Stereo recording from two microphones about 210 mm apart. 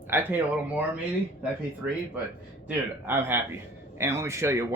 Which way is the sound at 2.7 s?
10° right (ahead or behind).